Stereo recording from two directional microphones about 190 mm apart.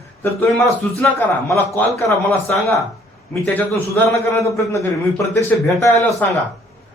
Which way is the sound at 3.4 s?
10° left (ahead or behind).